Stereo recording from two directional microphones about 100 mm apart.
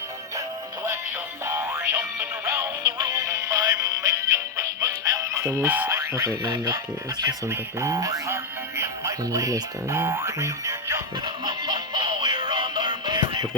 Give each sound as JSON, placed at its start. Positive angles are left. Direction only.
{"t": 1.5, "sound": "music", "side_deg": -25}
{"t": 2.8, "sound": "music", "side_deg": -40}
{"t": 5.9, "sound": "alarm", "side_deg": -30}
{"t": 6.4, "sound": "speech", "side_deg": -45}
{"t": 7.4, "sound": "speech", "side_deg": -30}
{"t": 11.4, "sound": "music", "side_deg": -45}